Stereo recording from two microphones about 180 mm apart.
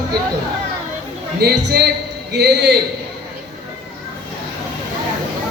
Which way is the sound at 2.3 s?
65° right (ahead or behind).